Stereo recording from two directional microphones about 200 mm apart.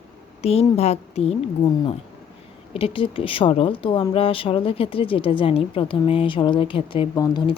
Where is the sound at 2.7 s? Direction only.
25° left (ahead or behind).